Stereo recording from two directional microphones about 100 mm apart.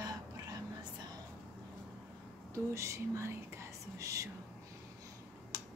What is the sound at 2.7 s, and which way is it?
Speech, 30° right (ahead or behind).